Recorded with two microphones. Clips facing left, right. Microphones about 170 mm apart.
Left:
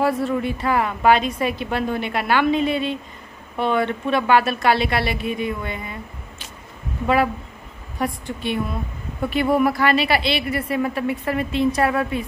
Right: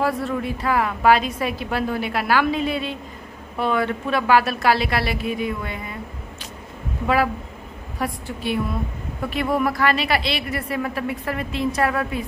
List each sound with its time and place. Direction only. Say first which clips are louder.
0.0 s a woman's voice: left 2 dB; centre (ahead or behind)
8.0 s a woman's voice: left 2 dB; 5° right (ahead or behind)